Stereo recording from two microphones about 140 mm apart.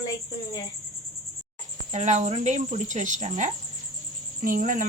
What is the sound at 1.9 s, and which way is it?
Speech, 60° right (ahead or behind).